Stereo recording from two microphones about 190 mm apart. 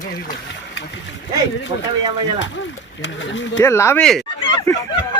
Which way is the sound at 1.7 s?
30° right (ahead or behind).